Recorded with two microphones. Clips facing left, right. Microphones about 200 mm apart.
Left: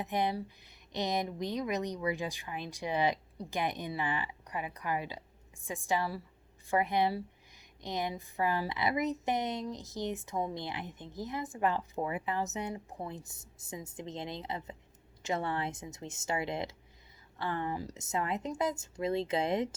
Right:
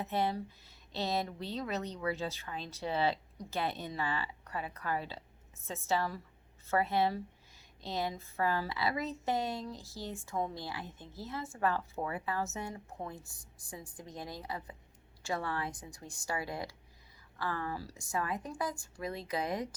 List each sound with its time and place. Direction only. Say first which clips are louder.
0.0 s speech: left 1 dB; 15° left (ahead or behind)